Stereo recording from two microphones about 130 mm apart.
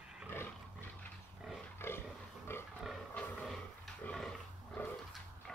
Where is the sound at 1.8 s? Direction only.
20° left (ahead or behind).